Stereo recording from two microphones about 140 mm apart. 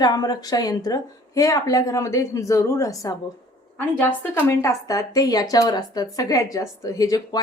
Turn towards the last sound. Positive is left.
turn(degrees=25)  # may be behind; listen again after turning